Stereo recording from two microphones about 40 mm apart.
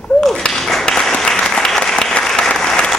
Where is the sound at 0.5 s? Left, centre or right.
Centre.